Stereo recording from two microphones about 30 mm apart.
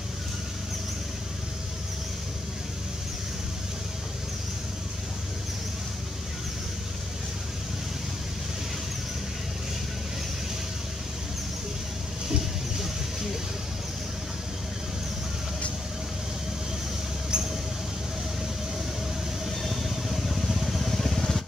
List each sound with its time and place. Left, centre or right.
17.3 s mouse: right
19.6 s vehicle: centre